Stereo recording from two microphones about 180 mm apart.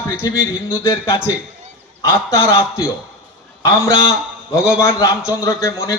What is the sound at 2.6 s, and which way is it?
A man's voice, 15° left (ahead or behind).